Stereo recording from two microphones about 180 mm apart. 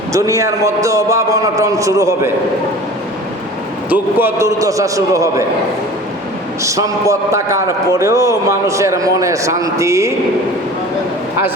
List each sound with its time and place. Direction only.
0.1 s a man's voice: 15° right (ahead or behind)
3.8 s a man's voice: 10° right (ahead or behind)
6.6 s a man's voice: 15° right (ahead or behind)